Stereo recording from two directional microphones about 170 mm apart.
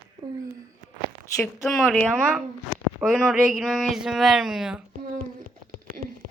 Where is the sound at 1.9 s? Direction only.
Centre (ahead or behind).